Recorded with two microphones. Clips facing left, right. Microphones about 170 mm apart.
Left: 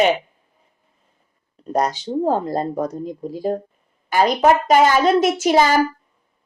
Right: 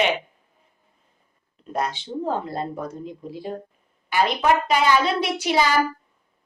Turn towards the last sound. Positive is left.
turn(degrees=45)  # may be behind; listen again after turning